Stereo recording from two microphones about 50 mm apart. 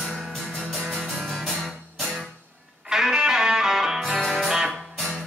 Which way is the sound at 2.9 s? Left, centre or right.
Centre.